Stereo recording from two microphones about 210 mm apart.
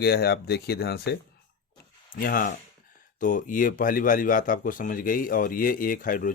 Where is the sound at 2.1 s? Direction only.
40° left (ahead or behind).